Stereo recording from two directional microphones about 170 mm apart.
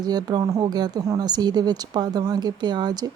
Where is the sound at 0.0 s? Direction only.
25° right (ahead or behind).